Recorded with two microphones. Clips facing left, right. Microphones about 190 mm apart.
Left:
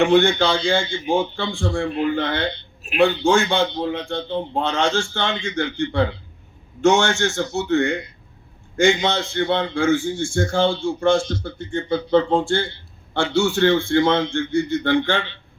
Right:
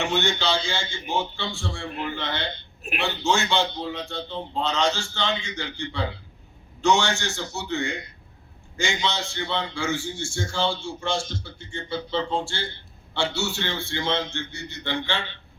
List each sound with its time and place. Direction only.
0.0 s a man's voice: 55° left (ahead or behind)